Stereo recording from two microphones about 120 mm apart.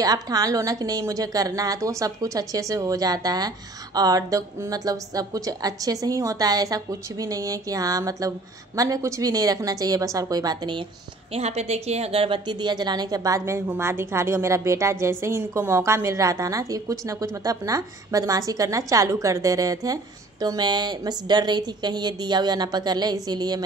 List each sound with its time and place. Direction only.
0.0 s a woman's voice: 30° right (ahead or behind)
11.3 s a woman's voice: 60° right (ahead or behind); by 23.6 s 35° right (ahead or behind)